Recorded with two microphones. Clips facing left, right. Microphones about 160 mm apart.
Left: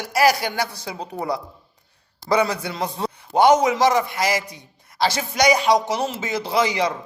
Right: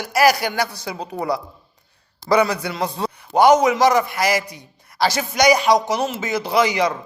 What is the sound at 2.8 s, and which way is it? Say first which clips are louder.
Speech: right 2 dB; 70° right (ahead or behind).